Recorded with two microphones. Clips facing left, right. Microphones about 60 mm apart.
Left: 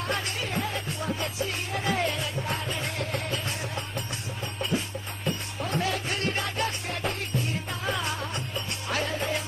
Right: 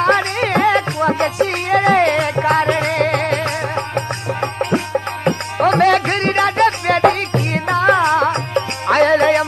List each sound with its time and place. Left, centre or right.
0.0 s music: right